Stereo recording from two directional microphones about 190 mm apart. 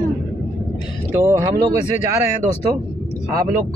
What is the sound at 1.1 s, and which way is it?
Speech, 15° right (ahead or behind).